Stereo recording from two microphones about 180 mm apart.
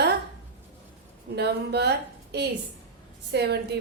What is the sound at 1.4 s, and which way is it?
A woman's voice, 65° right (ahead or behind).